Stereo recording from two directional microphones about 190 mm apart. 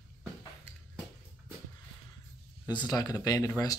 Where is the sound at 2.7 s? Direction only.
20° left (ahead or behind).